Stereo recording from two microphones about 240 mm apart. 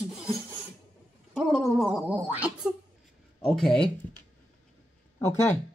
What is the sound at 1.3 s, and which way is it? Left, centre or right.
Gargling, centre.